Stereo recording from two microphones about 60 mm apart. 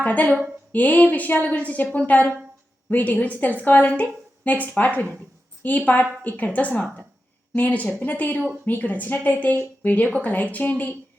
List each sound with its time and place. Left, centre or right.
0.0 s speech: left